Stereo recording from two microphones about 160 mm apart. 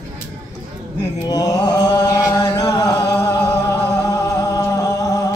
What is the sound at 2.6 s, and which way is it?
Music, 20° left (ahead or behind).